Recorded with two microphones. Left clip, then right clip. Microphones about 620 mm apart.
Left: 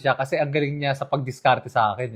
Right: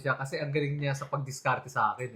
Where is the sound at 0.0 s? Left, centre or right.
Left.